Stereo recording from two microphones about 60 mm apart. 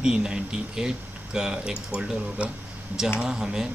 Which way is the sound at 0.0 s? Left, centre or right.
Centre.